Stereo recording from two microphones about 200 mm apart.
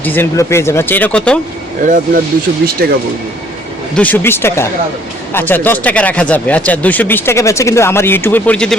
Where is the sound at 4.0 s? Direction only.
10° left (ahead or behind).